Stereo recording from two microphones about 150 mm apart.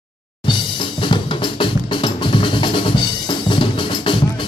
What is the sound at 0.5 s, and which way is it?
Drum, 35° left (ahead or behind).